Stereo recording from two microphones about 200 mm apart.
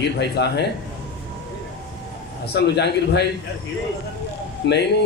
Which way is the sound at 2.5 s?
55° left (ahead or behind).